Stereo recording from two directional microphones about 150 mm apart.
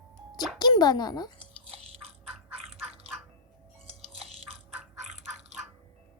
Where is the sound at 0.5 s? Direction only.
30° left (ahead or behind).